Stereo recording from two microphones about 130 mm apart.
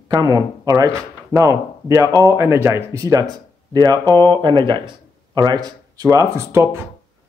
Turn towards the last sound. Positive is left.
turn(degrees=-25)  # may be behind; listen again after turning